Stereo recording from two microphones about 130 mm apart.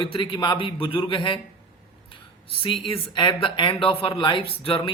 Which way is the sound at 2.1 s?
40° left (ahead or behind).